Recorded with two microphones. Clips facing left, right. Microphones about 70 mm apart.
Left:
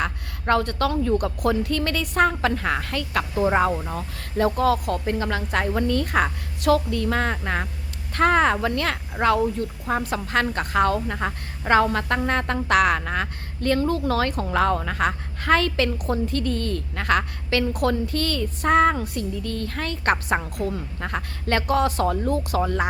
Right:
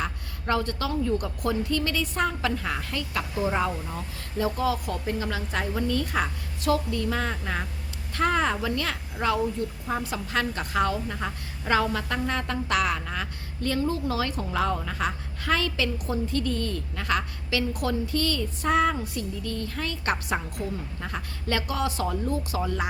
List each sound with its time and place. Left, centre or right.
0.0 s a woman's voice: left
3.4 s a woman's voice: left